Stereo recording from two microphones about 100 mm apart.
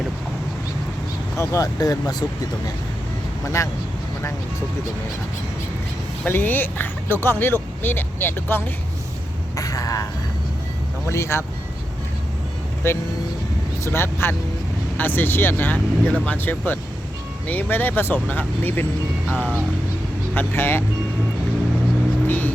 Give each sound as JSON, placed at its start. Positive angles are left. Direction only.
{"t": 1.4, "sound": "speech", "side_deg": 35}
{"t": 3.6, "sound": "speech", "side_deg": 30}
{"t": 6.2, "sound": "speech", "side_deg": 20}
{"t": 9.6, "sound": "speech", "side_deg": 35}
{"t": 12.8, "sound": "speech", "side_deg": 25}
{"t": 19.3, "sound": "speech", "side_deg": -10}
{"t": 20.3, "sound": "speech", "side_deg": 20}
{"t": 22.3, "sound": "vehicle", "side_deg": 15}